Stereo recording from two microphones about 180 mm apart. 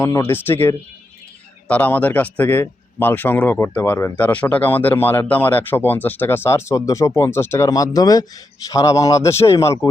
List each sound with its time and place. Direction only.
0.0 s a man's voice: 10° left (ahead or behind)